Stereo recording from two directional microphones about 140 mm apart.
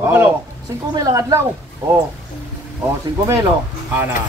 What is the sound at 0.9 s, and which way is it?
Speech, 25° right (ahead or behind).